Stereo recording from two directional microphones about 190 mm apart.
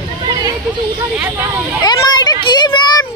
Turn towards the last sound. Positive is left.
turn(degrees=25)  # may be behind; listen again after turning